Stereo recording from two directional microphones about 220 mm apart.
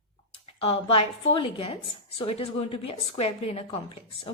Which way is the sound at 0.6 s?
25° left (ahead or behind).